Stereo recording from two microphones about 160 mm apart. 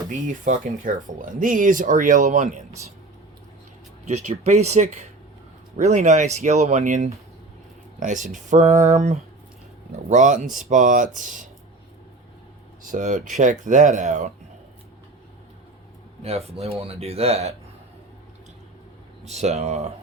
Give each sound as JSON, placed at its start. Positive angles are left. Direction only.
{"t": 0.1, "sound": "speech", "side_deg": -50}
{"t": 4.0, "sound": "speech", "side_deg": -45}
{"t": 12.8, "sound": "speech", "side_deg": -55}
{"t": 16.2, "sound": "speech", "side_deg": -40}
{"t": 19.2, "sound": "speech", "side_deg": -45}